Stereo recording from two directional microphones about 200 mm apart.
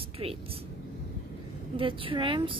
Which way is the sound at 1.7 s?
25° right (ahead or behind).